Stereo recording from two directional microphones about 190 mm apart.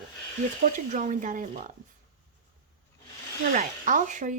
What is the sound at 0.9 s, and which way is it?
Speech, 40° right (ahead or behind).